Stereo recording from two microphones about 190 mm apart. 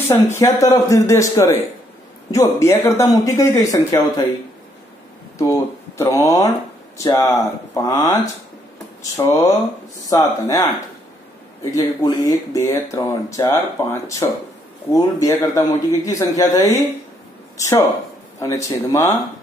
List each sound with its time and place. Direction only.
0.3 s speech: 15° left (ahead or behind)
5.5 s speech: 15° left (ahead or behind)
11.7 s speech: 20° left (ahead or behind)